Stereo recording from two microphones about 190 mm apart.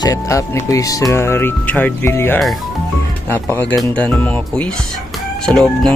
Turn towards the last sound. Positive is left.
turn(degrees=5)  # may be behind; listen again after turning